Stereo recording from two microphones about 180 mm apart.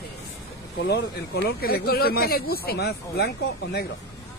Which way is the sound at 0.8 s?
65° left (ahead or behind).